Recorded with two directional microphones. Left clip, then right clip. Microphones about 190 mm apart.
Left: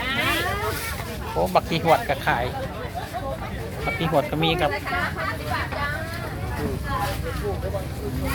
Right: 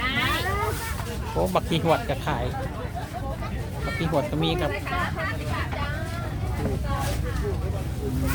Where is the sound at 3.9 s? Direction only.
Centre (ahead or behind).